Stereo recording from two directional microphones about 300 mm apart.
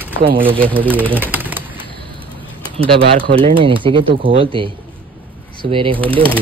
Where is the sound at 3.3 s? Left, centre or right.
Centre.